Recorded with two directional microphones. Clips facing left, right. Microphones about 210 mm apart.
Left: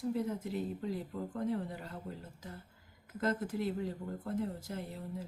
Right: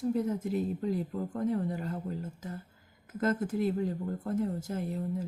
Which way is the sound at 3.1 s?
50° right (ahead or behind).